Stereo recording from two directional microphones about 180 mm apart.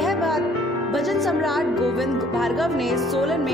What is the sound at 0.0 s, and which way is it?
Music, centre (ahead or behind).